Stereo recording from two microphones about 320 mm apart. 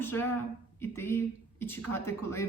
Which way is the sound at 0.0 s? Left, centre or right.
Centre.